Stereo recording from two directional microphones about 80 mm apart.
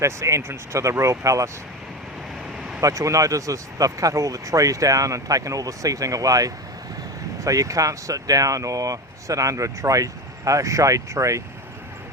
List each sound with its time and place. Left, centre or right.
0.0 s speech: right
2.8 s speech: right